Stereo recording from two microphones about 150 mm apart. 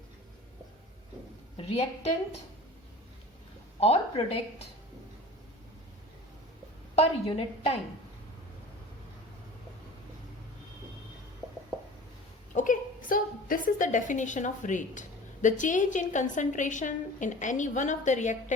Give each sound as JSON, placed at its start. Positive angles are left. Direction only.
{"t": 1.5, "sound": "a woman's voice", "side_deg": 40}
{"t": 3.8, "sound": "a woman's voice", "side_deg": 40}
{"t": 6.9, "sound": "a woman's voice", "side_deg": 40}
{"t": 12.5, "sound": "a woman's voice", "side_deg": 65}